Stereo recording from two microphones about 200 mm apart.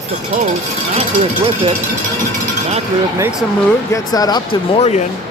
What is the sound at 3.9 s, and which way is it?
Speech, 20° left (ahead or behind).